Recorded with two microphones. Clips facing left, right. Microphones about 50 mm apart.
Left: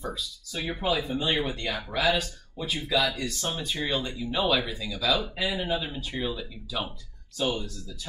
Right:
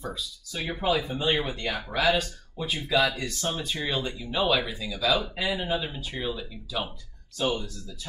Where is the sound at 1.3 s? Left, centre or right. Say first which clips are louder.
Even; centre.